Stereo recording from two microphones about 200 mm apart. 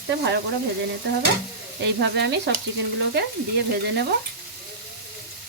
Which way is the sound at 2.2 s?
60° right (ahead or behind).